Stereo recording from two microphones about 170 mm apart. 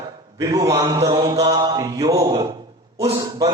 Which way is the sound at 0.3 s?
20° right (ahead or behind).